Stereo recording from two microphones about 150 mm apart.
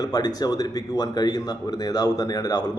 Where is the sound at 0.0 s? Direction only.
25° left (ahead or behind).